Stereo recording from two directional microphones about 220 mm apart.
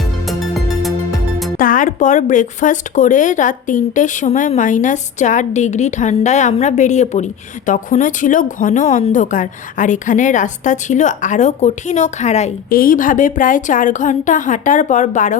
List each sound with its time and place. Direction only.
0.8 s music: centre (ahead or behind)
1.5 s a woman's voice: 40° left (ahead or behind)